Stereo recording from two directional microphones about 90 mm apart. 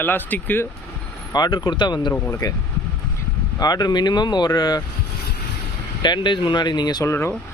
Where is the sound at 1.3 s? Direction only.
50° left (ahead or behind).